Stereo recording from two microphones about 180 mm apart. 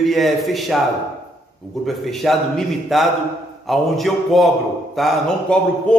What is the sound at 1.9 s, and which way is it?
A man's voice, centre (ahead or behind).